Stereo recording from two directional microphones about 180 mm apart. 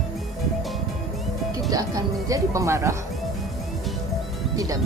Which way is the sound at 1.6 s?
20° right (ahead or behind).